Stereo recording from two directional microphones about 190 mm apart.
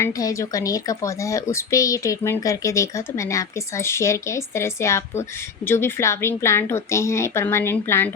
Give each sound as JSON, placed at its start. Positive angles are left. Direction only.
{"t": 0.0, "sound": "speech", "side_deg": 15}